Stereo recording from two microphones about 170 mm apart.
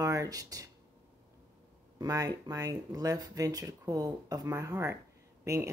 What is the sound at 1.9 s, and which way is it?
Speech, 20° right (ahead or behind).